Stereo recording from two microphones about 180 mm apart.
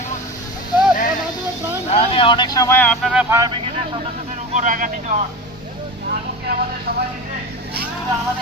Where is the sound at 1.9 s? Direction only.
30° left (ahead or behind); by 3.5 s 15° right (ahead or behind).